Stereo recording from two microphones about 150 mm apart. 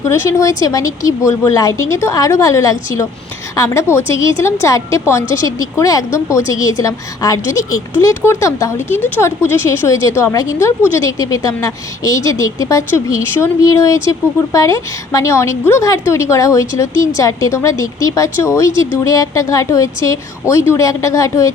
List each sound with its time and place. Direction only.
0.0 s speech: 20° left (ahead or behind)